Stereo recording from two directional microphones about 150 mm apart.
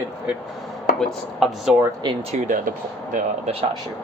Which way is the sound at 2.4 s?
60° right (ahead or behind).